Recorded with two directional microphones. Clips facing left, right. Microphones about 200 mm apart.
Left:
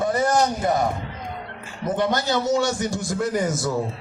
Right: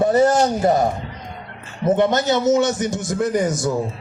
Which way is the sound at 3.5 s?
Centre (ahead or behind).